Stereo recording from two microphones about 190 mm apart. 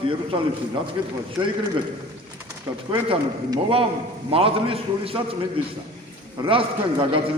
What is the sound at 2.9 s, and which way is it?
A man's voice, 25° right (ahead or behind).